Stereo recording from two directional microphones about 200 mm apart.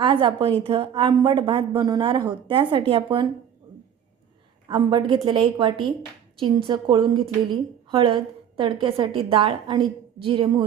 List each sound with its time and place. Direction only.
0.0 s a woman's voice: 25° right (ahead or behind)
4.7 s a woman's voice: 25° right (ahead or behind)